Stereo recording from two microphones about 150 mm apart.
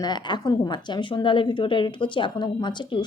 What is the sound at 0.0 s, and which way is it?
A woman's voice, 30° left (ahead or behind).